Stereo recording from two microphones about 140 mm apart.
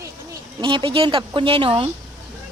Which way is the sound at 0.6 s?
35° right (ahead or behind).